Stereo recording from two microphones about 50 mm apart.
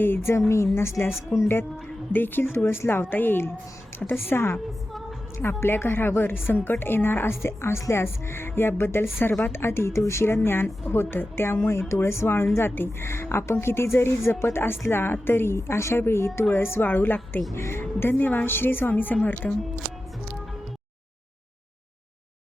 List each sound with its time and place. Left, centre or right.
0.0 s a woman's voice: left
0.3 s speech: left
2.1 s a woman's voice: left
12.5 s a woman's voice: left
16.5 s a woman's voice: left
16.8 s a woman's voice: left
17.5 s a woman's voice: left
19.4 s speech: centre